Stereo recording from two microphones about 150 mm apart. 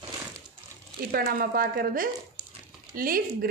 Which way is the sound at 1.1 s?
80° right.